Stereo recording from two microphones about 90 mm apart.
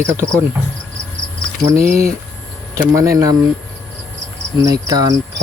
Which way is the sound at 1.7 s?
35° right (ahead or behind).